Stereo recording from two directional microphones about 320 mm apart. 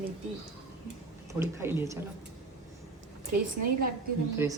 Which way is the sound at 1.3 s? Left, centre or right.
Centre.